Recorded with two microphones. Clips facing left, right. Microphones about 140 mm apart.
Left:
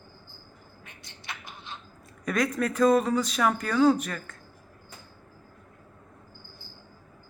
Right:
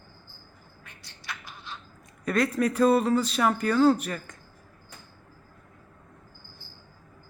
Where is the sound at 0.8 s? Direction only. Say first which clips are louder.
Right 1 dB; 20° left (ahead or behind).